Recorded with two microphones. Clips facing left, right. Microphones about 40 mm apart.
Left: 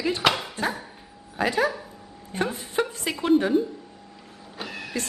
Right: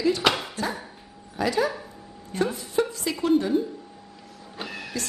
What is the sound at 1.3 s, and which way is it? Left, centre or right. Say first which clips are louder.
Speech: even; left.